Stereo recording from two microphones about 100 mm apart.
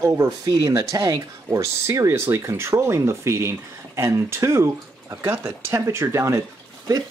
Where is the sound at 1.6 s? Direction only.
25° right (ahead or behind).